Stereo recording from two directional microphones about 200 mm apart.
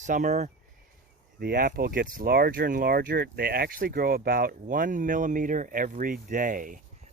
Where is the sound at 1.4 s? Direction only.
50° right (ahead or behind).